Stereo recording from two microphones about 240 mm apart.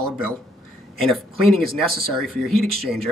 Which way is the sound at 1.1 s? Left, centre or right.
Centre.